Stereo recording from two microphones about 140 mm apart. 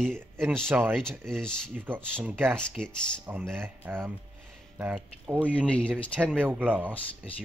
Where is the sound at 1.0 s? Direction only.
5° left (ahead or behind).